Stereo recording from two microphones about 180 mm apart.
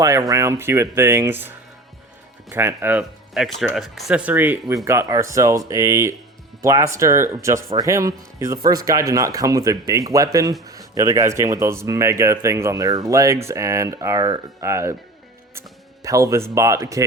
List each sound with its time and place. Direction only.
0.0 s speech: 20° right (ahead or behind)
16.0 s speech: 15° right (ahead or behind)